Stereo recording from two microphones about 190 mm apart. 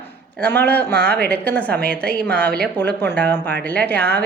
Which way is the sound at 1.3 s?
10° left (ahead or behind).